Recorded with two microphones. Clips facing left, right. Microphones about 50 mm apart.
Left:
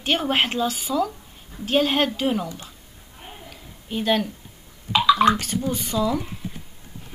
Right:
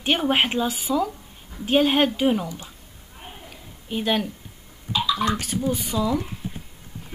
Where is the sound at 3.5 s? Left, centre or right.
Centre.